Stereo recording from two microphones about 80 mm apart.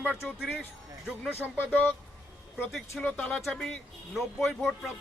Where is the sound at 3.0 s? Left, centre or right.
Centre.